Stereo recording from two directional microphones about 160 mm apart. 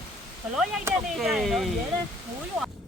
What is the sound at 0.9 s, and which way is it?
Speech, 15° right (ahead or behind).